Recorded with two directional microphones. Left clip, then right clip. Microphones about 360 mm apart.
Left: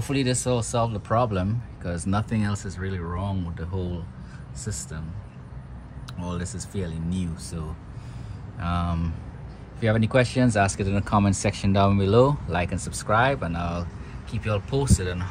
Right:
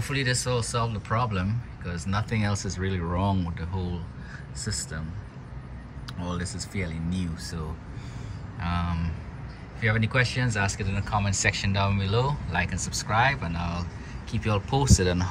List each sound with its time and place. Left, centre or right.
0.0 s speech: centre
2.3 s speech: centre
6.4 s speech: centre
8.6 s speech: centre